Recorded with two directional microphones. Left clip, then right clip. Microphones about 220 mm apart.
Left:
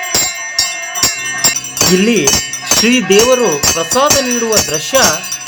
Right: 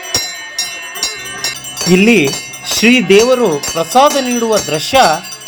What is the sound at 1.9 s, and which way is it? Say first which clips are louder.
Speech: right 4 dB; 15° right (ahead or behind).